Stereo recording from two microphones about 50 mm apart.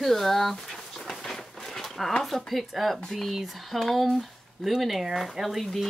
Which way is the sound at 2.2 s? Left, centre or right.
Centre.